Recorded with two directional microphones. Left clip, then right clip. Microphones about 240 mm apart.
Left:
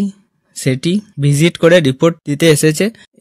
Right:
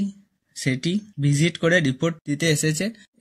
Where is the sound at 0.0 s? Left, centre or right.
Left.